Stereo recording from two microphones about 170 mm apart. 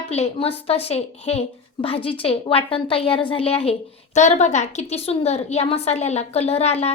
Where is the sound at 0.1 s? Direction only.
35° left (ahead or behind).